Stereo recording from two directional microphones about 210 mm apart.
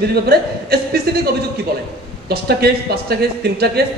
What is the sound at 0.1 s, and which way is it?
Speech, 50° right (ahead or behind).